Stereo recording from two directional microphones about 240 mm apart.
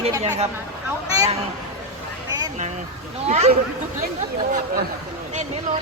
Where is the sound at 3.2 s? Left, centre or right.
Right.